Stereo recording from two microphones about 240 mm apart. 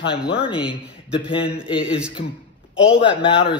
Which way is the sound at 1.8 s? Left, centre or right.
Centre.